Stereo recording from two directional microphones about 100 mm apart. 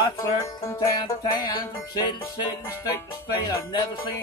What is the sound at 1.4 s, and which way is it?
Speech, 45° left (ahead or behind).